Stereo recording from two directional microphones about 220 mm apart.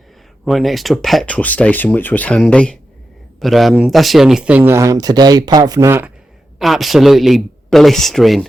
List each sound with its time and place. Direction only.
0.4 s speech: centre (ahead or behind)
6.6 s speech: centre (ahead or behind)